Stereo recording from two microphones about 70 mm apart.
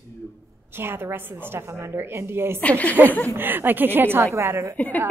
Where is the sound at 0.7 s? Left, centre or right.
Right.